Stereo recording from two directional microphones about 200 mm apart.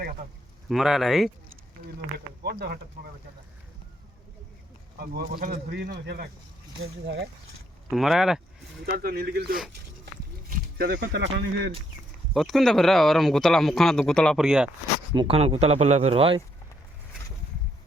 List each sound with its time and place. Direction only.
0.7 s speech: centre (ahead or behind)
2.1 s speech: 55° right (ahead or behind)
4.9 s speech: 50° right (ahead or behind)
7.9 s speech: centre (ahead or behind)
8.8 s speech: 50° right (ahead or behind)
10.5 s wild animals: 45° right (ahead or behind)
11.2 s speech: 60° right (ahead or behind)
12.3 s speech: centre (ahead or behind)
15.1 s speech: 25° right (ahead or behind)